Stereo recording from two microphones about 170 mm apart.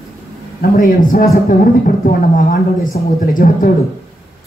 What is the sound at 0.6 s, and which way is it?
A man's voice, 55° left (ahead or behind).